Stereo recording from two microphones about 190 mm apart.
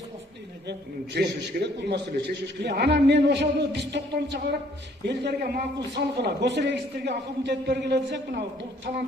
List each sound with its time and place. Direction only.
0.7 s a man's voice: 60° right (ahead or behind)